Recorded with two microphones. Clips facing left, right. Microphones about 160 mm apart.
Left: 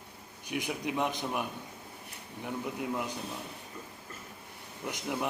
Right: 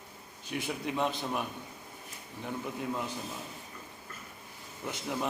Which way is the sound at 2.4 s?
15° left (ahead or behind).